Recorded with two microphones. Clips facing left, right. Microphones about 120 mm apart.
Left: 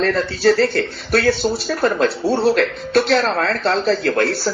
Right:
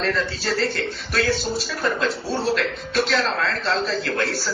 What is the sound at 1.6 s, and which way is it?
Speech, 45° left (ahead or behind).